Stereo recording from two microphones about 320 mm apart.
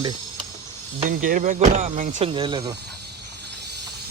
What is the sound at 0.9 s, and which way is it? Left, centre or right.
Speech, right.